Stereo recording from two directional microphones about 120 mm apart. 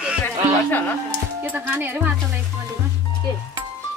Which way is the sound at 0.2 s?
15° left (ahead or behind).